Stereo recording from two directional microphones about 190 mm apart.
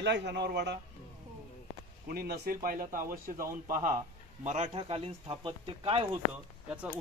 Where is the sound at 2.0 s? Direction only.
55° right (ahead or behind); by 6.0 s 30° right (ahead or behind).